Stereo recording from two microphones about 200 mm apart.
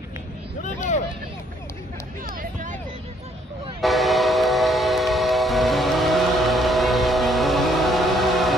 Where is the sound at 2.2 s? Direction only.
45° right (ahead or behind).